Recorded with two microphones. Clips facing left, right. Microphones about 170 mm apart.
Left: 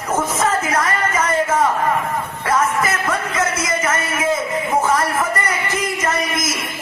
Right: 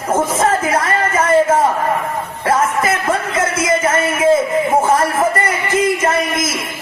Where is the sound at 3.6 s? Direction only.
30° right (ahead or behind).